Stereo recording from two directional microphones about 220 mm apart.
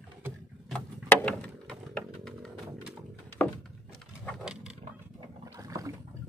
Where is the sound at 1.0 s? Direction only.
5° left (ahead or behind).